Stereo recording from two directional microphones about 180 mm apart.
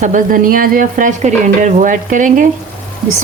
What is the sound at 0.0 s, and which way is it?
Speech, 45° right (ahead or behind).